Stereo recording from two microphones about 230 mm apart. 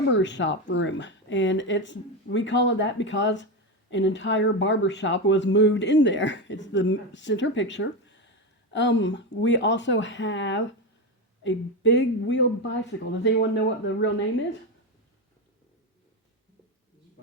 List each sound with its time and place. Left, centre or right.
0.1 s speech: left